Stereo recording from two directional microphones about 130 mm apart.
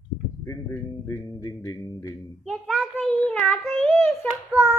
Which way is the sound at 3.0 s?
10° left (ahead or behind).